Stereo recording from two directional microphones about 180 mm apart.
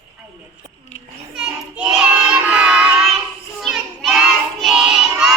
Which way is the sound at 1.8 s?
5° right (ahead or behind).